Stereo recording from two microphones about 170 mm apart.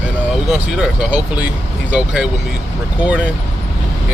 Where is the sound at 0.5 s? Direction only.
5° right (ahead or behind).